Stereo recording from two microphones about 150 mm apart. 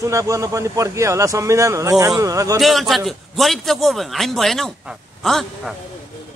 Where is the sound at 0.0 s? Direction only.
20° right (ahead or behind).